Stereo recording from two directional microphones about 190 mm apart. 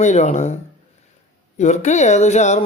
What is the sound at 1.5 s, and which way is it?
Speech, 40° left (ahead or behind).